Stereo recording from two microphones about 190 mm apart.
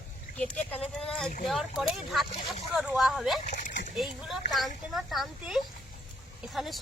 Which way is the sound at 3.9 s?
Centre (ahead or behind).